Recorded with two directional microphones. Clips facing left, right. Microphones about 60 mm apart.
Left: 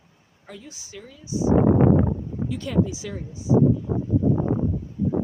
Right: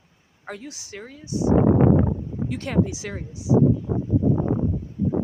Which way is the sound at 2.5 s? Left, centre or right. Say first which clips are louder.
Even; right.